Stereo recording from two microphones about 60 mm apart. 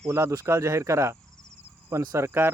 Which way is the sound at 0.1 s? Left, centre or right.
Right.